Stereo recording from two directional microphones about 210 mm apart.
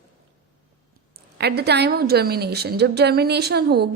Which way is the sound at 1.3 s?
50° right (ahead or behind).